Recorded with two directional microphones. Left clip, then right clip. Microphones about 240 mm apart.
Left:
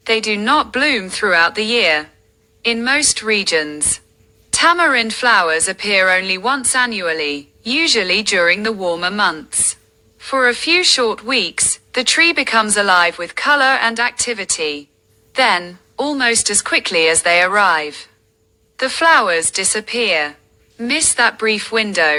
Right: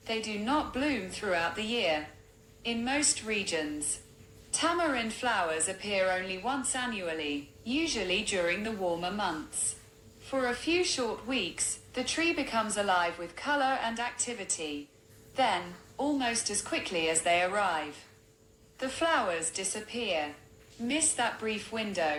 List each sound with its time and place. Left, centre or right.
0.0 s a woman's voice: left